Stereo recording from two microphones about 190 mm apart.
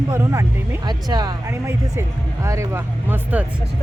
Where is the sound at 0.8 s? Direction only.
20° right (ahead or behind).